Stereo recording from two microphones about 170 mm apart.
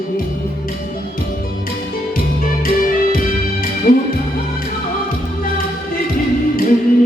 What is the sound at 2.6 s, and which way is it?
Music, 55° left (ahead or behind).